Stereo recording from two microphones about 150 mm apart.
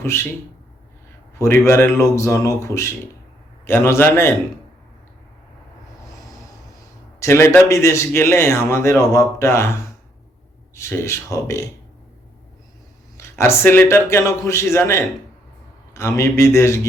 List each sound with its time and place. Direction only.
0.0 s a man's voice: 15° left (ahead or behind)
1.4 s a man's voice: 15° left (ahead or behind)
7.2 s a man's voice: 20° left (ahead or behind)
10.8 s a man's voice: 15° left (ahead or behind)
13.1 s a man's voice: 20° left (ahead or behind)